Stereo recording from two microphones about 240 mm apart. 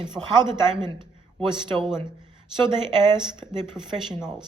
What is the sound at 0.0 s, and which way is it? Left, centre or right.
Speech, centre.